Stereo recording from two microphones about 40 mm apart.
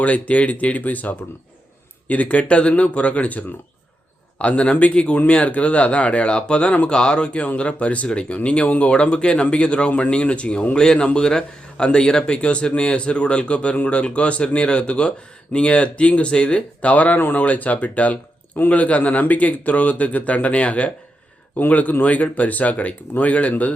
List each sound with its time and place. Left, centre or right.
0.0 s a man's voice: left
8.6 s speech: left
8.9 s a man's voice: left